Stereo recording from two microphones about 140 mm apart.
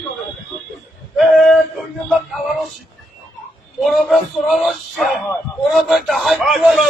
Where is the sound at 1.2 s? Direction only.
Centre (ahead or behind).